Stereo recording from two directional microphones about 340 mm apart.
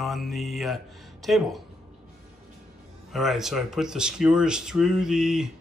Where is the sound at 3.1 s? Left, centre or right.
Centre.